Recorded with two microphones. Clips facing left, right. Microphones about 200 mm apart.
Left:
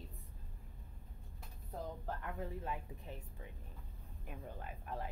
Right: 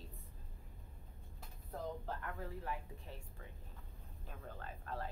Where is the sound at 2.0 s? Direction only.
20° left (ahead or behind).